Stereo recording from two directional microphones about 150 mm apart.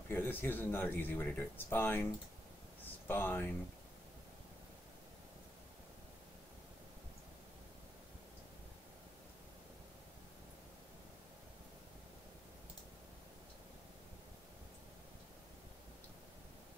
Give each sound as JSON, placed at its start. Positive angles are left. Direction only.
{"t": 0.1, "sound": "speech", "side_deg": 15}
{"t": 3.1, "sound": "speech", "side_deg": 10}